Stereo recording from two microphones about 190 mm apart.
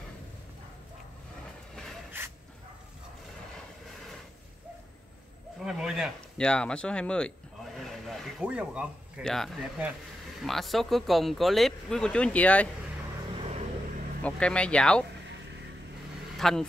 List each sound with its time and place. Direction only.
2.1 s dog: 10° right (ahead or behind)
5.6 s speech: centre (ahead or behind)
13.4 s vehicle: 35° right (ahead or behind)
14.2 s speech: 5° left (ahead or behind)
16.3 s speech: centre (ahead or behind)